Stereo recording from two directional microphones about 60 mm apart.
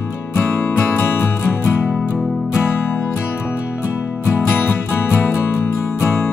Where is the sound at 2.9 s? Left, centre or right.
Left.